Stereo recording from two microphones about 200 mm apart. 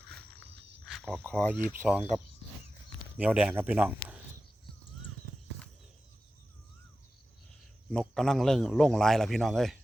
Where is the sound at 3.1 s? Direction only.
5° right (ahead or behind).